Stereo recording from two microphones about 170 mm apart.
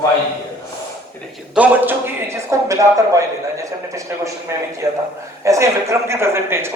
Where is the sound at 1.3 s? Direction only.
10° right (ahead or behind).